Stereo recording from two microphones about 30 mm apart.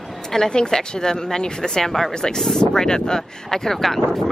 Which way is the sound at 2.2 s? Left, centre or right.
Left.